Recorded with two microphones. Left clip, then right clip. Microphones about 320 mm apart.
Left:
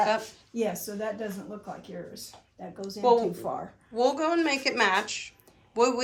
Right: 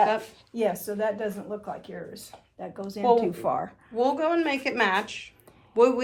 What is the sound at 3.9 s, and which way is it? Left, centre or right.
A woman's voice, centre.